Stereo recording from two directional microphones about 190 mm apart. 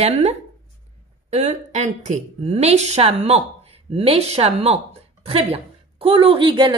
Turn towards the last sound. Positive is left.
turn(degrees=-25)  # may be behind; listen again after turning